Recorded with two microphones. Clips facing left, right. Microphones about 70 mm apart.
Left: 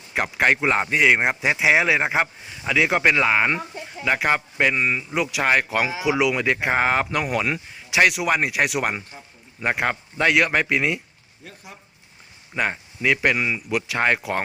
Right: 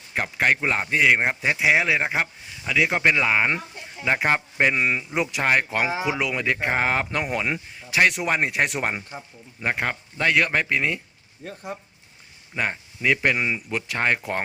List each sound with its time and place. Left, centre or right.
0.1 s speech: centre
4.4 s a man's voice: centre
4.7 s speech: right
5.1 s speech: centre
6.1 s speech: centre
11.4 s speech: right
12.5 s speech: centre